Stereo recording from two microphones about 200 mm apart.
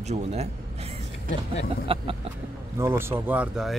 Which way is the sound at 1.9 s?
25° right (ahead or behind).